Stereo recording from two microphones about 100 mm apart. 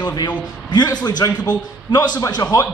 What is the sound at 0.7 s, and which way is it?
A man's voice, 45° left (ahead or behind).